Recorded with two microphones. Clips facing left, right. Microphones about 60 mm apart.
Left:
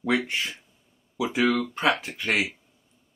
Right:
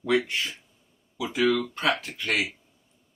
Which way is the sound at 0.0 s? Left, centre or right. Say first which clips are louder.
Right 1 dB; left.